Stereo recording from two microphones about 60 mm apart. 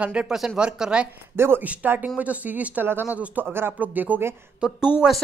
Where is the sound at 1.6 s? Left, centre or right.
Right.